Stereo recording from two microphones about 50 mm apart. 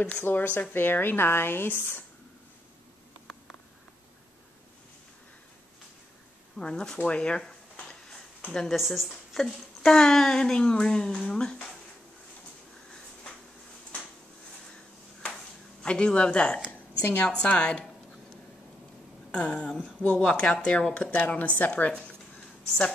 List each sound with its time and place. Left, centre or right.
0.2 s speech: left
6.6 s a woman's voice: centre
8.7 s a woman's voice: centre
9.4 s speech: centre
15.8 s a woman's voice: centre
19.3 s a woman's voice: left
22.7 s a woman's voice: centre